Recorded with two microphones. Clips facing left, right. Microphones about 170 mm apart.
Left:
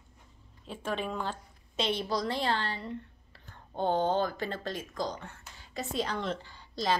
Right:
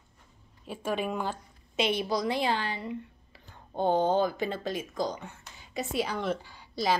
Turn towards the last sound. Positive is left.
turn(degrees=-10)  # may be behind; listen again after turning